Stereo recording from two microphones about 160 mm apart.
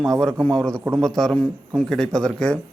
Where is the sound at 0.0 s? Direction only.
Centre (ahead or behind).